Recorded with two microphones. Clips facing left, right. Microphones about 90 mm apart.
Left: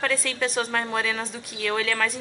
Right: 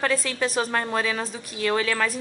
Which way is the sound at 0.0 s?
5° right (ahead or behind).